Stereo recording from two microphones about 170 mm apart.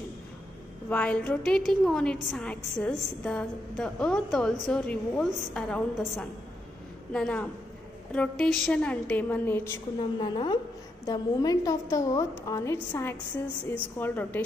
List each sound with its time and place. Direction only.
0.8 s a woman's voice: 10° left (ahead or behind)
10.1 s a woman's voice: 25° left (ahead or behind)